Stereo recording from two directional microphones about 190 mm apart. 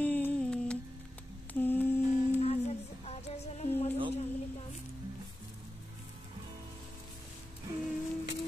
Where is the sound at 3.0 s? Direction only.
35° left (ahead or behind).